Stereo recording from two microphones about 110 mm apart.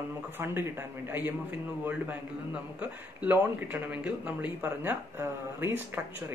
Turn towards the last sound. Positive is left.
turn(degrees=-20)  # may be behind; listen again after turning